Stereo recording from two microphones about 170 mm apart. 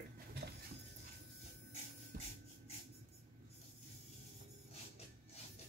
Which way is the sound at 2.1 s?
55° right (ahead or behind).